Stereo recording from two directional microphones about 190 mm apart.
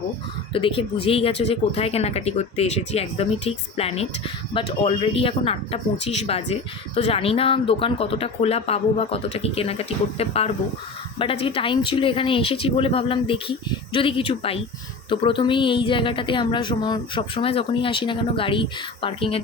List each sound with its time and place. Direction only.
0.5 s speech: 25° left (ahead or behind)